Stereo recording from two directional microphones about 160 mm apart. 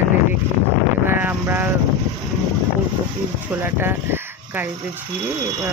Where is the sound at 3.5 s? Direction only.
15° right (ahead or behind).